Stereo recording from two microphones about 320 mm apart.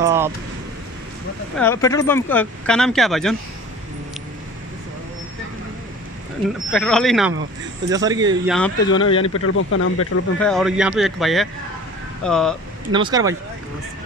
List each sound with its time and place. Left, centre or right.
0.0 s a sound: centre
1.6 s speech: centre
6.7 s speech: centre
7.9 s speech: centre
8.5 s speech: centre
8.8 s speech: centre
9.3 s speech: left
10.4 s speech: centre
12.9 s speech: centre